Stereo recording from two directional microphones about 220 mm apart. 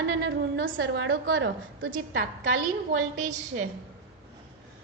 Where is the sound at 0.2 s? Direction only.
50° right (ahead or behind).